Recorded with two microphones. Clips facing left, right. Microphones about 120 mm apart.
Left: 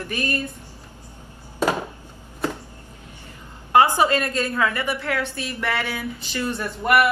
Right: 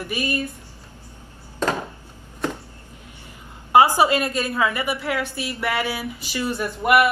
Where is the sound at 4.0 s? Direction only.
15° right (ahead or behind).